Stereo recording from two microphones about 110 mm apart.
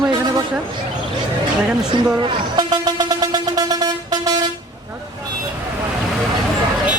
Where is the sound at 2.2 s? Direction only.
45° right (ahead or behind).